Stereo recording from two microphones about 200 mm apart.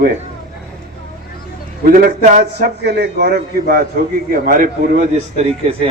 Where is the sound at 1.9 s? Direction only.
45° right (ahead or behind).